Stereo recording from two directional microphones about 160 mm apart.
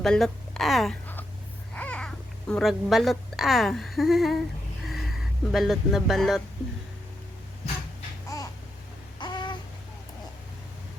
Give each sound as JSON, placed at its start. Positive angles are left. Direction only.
{"t": 0.0, "sound": "speech", "side_deg": 5}
{"t": 5.5, "sound": "speech", "side_deg": 0}
{"t": 8.3, "sound": "babbling", "side_deg": 20}
{"t": 9.1, "sound": "a sound", "side_deg": 30}